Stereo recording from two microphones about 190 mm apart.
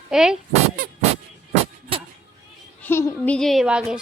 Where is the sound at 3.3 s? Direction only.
Centre (ahead or behind).